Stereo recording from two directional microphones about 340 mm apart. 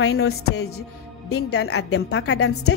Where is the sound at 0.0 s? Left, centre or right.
Left.